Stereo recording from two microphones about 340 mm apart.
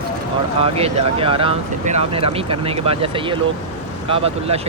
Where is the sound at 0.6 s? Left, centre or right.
Centre.